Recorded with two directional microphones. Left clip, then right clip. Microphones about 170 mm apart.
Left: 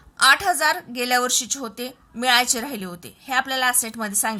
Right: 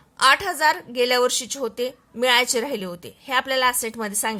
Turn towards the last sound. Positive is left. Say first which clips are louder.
# even
turn(degrees=-20)  # may be behind; listen again after turning